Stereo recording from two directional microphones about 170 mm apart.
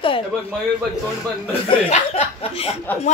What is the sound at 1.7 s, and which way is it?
Speech, 40° left (ahead or behind).